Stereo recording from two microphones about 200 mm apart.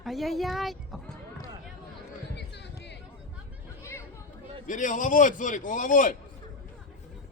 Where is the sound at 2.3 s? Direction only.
60° left (ahead or behind).